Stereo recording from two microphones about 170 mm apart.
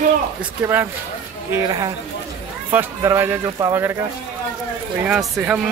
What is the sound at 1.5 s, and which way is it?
A woman's voice, 25° right (ahead or behind).